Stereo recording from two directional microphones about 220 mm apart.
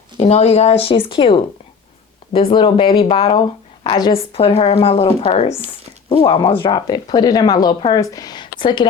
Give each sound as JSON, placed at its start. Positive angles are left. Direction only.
{"t": 0.2, "sound": "speech", "side_deg": 30}